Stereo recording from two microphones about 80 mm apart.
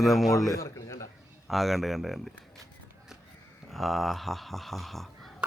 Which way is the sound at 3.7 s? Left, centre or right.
Centre.